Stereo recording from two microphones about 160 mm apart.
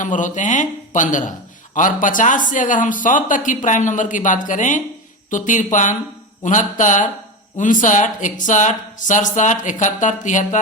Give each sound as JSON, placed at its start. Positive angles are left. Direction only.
{"t": 0.0, "sound": "speech", "side_deg": 50}